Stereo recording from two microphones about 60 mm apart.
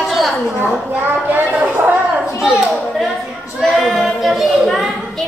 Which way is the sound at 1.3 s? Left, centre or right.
Right.